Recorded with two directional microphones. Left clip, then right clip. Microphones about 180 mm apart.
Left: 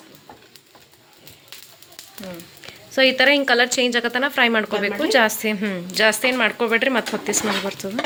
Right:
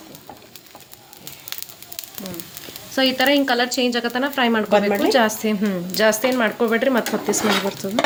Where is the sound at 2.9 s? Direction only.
10° left (ahead or behind).